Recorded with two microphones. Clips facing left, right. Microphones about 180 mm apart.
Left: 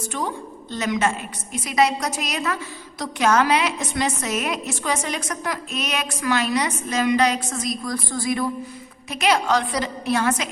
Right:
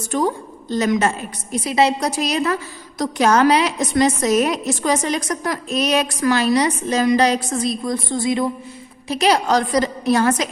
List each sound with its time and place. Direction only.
0.1 s a woman's voice: 40° right (ahead or behind); by 8.4 s 25° right (ahead or behind)
9.0 s a woman's voice: 35° right (ahead or behind)